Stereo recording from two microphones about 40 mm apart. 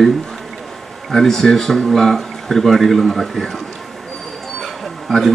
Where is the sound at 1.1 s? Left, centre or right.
Centre.